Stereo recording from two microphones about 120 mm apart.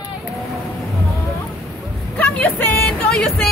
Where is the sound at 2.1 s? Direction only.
15° left (ahead or behind).